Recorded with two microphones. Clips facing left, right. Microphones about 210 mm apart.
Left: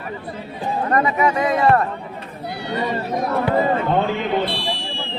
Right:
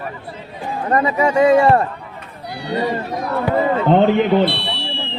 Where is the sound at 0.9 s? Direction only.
30° right (ahead or behind).